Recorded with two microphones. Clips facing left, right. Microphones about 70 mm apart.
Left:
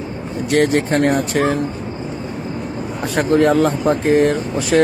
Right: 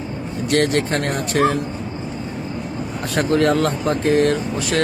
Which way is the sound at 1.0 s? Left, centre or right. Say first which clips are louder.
Left 2 dB; centre.